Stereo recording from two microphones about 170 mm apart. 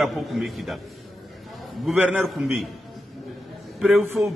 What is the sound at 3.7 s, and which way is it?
Speech, centre (ahead or behind).